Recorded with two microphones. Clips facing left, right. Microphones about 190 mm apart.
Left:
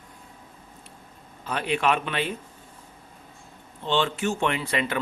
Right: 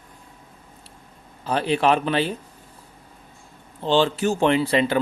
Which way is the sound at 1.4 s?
35° right (ahead or behind).